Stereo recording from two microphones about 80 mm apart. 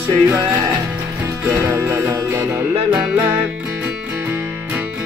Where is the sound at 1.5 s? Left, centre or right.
Right.